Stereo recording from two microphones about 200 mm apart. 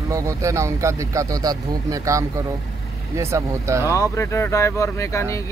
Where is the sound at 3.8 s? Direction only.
15° left (ahead or behind).